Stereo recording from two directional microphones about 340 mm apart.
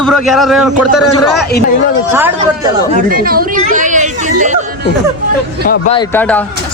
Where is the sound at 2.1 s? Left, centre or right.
Centre.